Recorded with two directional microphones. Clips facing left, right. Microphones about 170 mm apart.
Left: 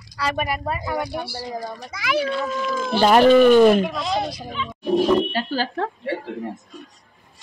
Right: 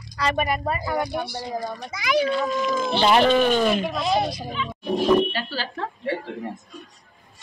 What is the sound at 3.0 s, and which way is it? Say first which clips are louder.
Speech: left 5 dB; 45° left (ahead or behind).